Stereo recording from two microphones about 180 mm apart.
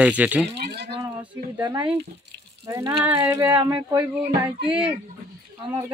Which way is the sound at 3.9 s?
30° right (ahead or behind).